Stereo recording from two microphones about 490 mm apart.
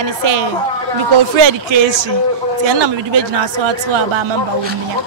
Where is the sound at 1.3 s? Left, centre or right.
Right.